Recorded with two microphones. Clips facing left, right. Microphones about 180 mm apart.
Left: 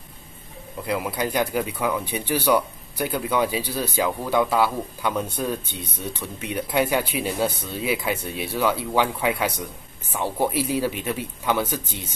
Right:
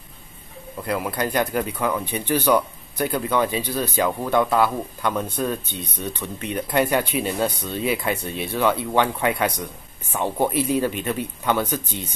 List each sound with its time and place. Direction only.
0.9 s speech: 10° left (ahead or behind)